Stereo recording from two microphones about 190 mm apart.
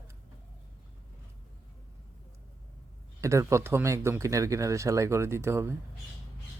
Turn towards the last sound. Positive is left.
turn(degrees=-15)  # may be behind; listen again after turning